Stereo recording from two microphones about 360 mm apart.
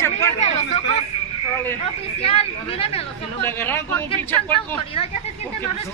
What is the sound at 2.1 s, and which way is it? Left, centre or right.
Speech, centre.